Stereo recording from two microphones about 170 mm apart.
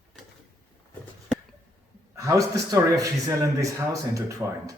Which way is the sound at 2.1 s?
20° right (ahead or behind).